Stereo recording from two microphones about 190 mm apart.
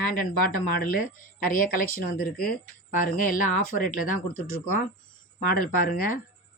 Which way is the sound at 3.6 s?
50° left (ahead or behind).